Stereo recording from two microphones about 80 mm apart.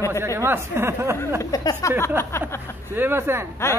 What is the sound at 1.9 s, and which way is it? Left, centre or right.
Speech, left.